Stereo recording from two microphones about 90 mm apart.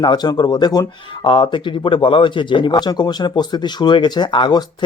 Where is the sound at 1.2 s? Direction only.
65° left (ahead or behind).